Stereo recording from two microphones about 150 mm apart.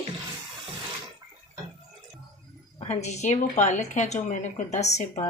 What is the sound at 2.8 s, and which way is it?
A woman's voice, 50° left (ahead or behind).